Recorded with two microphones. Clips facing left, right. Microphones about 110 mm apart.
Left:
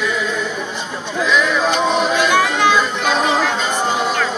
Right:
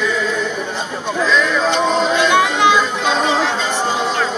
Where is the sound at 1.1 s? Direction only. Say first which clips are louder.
Even; 5° left (ahead or behind).